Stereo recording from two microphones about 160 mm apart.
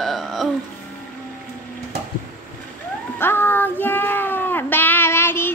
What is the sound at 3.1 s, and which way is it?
Child singing, 15° left (ahead or behind).